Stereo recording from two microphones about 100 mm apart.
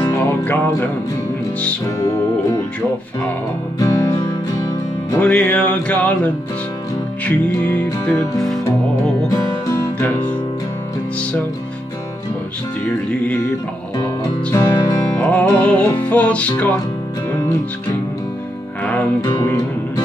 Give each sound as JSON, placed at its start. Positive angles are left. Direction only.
{"t": 0.0, "sound": "music", "side_deg": 25}
{"t": 2.0, "sound": "music", "side_deg": 35}
{"t": 3.8, "sound": "music", "side_deg": 30}
{"t": 5.2, "sound": "music", "side_deg": 15}
{"t": 13.9, "sound": "music", "side_deg": 30}
{"t": 15.1, "sound": "music", "side_deg": 15}